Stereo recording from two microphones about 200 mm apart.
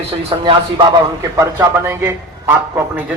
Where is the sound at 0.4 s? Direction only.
20° right (ahead or behind).